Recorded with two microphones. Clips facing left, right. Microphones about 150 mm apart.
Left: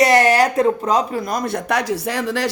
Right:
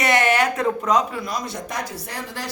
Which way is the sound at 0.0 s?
35° left (ahead or behind).